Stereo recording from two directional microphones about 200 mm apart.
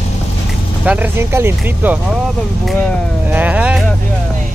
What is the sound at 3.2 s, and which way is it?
Speech, 10° right (ahead or behind).